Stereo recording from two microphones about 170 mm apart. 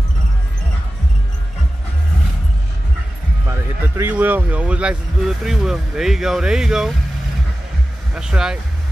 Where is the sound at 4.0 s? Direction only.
10° right (ahead or behind).